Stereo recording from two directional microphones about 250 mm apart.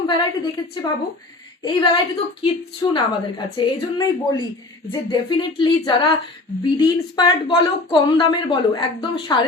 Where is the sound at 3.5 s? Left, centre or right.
Centre.